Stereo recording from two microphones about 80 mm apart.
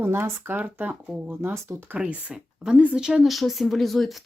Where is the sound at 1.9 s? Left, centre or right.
Centre.